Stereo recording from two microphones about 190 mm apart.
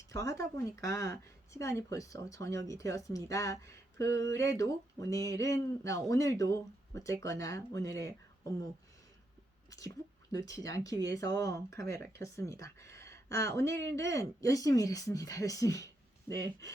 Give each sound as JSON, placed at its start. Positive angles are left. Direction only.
{"t": 0.1, "sound": "speech", "side_deg": 15}
{"t": 9.6, "sound": "whispering", "side_deg": 20}
{"t": 10.3, "sound": "speech", "side_deg": 20}